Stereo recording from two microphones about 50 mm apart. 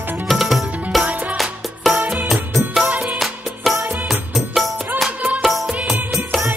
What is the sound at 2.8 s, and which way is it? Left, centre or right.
Music, right.